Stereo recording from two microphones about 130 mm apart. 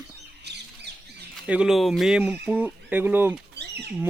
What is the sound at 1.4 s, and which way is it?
Speech, 5° right (ahead or behind).